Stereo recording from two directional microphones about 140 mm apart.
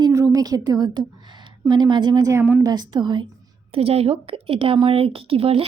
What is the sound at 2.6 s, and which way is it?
Speech, 30° right (ahead or behind).